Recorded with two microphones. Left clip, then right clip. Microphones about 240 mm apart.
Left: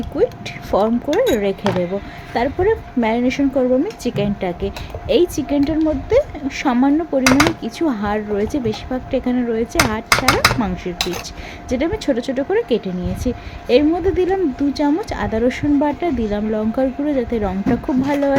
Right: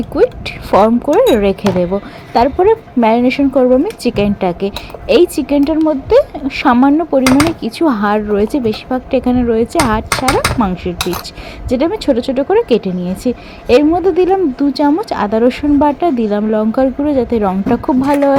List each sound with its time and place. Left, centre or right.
0.2 s speech: centre